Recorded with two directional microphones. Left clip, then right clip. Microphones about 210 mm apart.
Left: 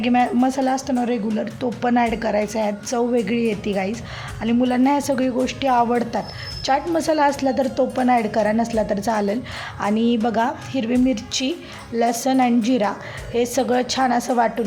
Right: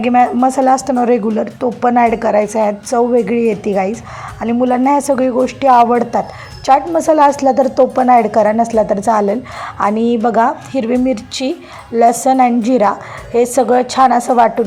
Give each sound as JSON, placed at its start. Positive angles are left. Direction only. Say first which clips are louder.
{"t": 0.0, "sound": "a woman's voice", "louder": "right 8 dB", "side_deg": 0}
{"t": 0.9, "sound": "a woman's voice", "louder": "right 10 dB", "side_deg": -15}
{"t": 1.3, "sound": "a woman's voice", "louder": "right 8 dB", "side_deg": -5}
{"t": 12.1, "sound": "a woman's voice", "louder": "right 8 dB", "side_deg": -10}